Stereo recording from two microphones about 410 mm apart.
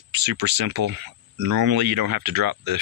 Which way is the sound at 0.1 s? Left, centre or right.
Right.